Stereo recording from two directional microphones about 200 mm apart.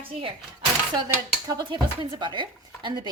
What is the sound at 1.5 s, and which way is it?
A woman's voice, 20° right (ahead or behind).